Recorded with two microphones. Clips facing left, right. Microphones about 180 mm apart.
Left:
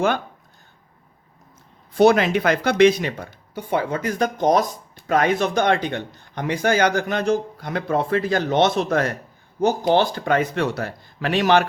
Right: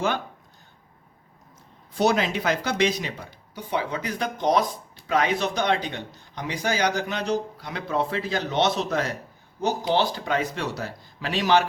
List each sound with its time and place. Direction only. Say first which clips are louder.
2.0 s speech: left 7 dB; 60° left (ahead or behind)